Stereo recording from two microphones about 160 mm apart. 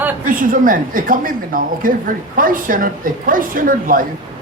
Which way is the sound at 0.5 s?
60° right (ahead or behind).